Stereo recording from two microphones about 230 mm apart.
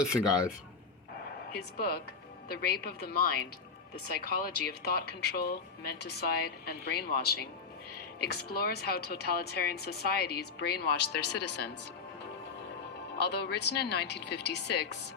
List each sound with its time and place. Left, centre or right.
0.0 s speech: centre
1.5 s a woman's voice: left
13.1 s a woman's voice: left